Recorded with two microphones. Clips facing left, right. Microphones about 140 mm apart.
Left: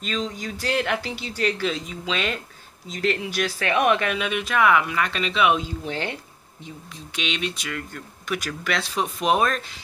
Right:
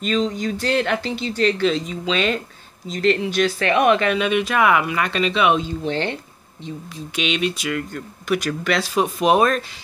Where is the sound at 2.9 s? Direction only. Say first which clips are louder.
Right 6 dB; 5° left (ahead or behind).